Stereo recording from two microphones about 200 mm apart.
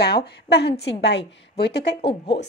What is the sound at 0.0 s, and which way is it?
A woman's voice, 55° left (ahead or behind).